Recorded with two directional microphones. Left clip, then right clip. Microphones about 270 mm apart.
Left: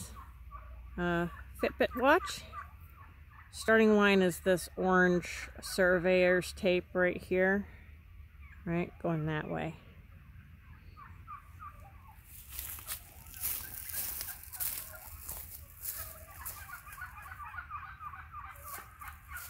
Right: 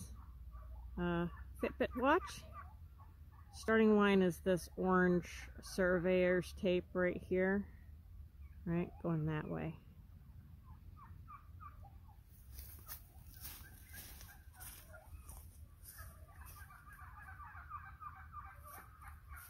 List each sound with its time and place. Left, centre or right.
0.9 s speech: centre
3.5 s speech: centre
8.6 s speech: centre
14.2 s turkey: left